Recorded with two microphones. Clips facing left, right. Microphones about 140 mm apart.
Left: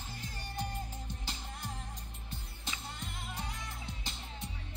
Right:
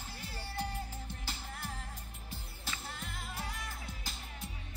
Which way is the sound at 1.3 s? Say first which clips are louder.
Even; 15° left (ahead or behind).